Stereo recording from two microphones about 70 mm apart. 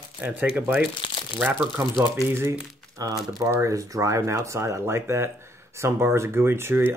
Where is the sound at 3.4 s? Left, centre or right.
Right.